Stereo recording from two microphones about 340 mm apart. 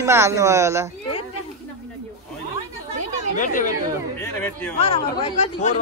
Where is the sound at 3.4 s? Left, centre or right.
Left.